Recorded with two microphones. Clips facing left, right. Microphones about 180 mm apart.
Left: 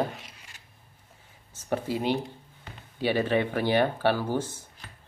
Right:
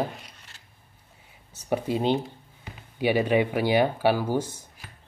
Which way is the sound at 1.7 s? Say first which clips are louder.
Right 3 dB; 20° right (ahead or behind).